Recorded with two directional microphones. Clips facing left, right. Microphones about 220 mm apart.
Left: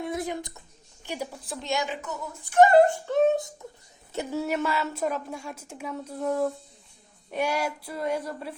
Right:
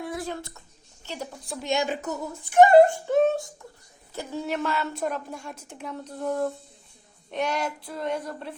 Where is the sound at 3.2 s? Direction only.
20° left (ahead or behind).